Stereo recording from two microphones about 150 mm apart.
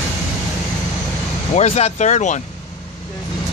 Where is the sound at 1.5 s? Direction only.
45° left (ahead or behind).